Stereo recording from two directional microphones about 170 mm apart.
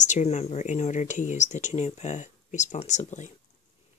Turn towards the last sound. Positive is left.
turn(degrees=45)  # may be behind; listen again after turning